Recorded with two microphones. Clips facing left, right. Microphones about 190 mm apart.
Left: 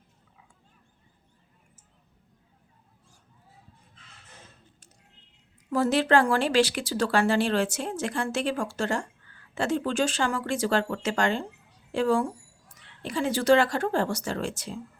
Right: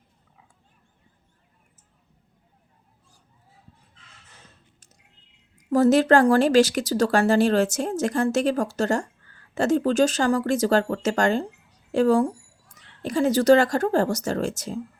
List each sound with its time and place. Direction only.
5.7 s speech: 45° right (ahead or behind)